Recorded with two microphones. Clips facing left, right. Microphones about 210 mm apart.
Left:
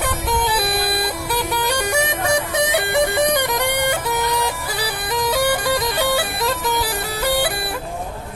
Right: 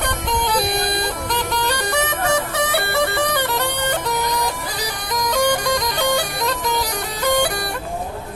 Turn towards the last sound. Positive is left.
turn(degrees=5)  # may be behind; listen again after turning